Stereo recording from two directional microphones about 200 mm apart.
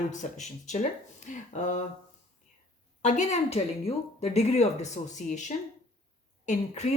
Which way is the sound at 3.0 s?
35° left (ahead or behind).